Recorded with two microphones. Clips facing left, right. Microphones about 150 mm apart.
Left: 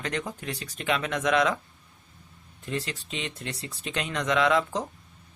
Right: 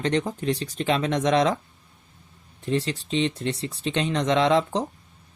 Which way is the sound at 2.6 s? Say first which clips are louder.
Right 7 dB; 30° right (ahead or behind).